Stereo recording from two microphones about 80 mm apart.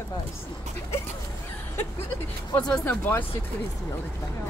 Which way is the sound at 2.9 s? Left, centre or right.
Left.